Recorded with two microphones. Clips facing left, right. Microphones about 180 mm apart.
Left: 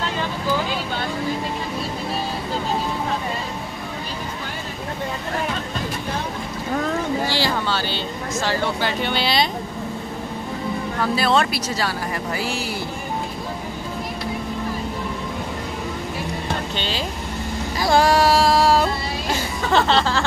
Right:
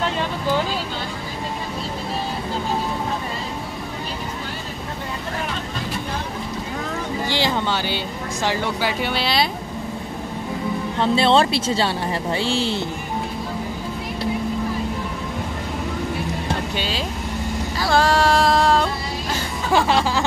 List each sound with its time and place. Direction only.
7.2 s speech: 20° right (ahead or behind); by 9.5 s centre (ahead or behind)
11.0 s speech: 25° right (ahead or behind)
16.7 s music: 5° right (ahead or behind)
17.7 s a sound: 15° left (ahead or behind)
19.7 s music: 10° right (ahead or behind)